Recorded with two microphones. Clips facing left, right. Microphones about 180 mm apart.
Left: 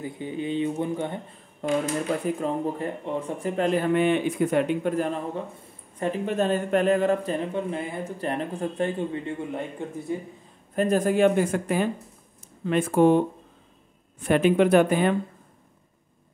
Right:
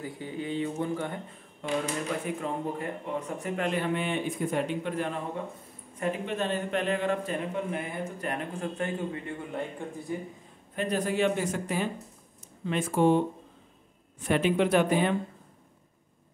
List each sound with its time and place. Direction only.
0.0 s speech: 20° left (ahead or behind)
1.6 s a man's voice: 40° left (ahead or behind)
3.9 s speech: 60° left (ahead or behind)
4.8 s a man's voice: 40° left (ahead or behind); by 10.1 s 20° left (ahead or behind)
10.8 s speech: 45° left (ahead or behind)
14.2 s speech: 50° left (ahead or behind)